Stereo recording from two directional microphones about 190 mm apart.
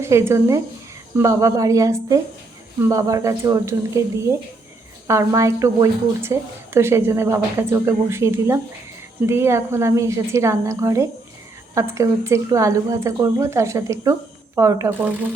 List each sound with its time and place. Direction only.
0.0 s a woman's voice: 15° right (ahead or behind)